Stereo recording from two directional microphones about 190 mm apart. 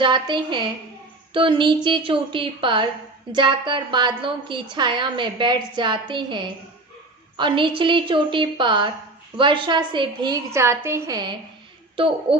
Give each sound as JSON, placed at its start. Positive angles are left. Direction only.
{"t": 0.0, "sound": "a woman's voice", "side_deg": -25}
{"t": 10.5, "sound": "a woman's voice", "side_deg": -15}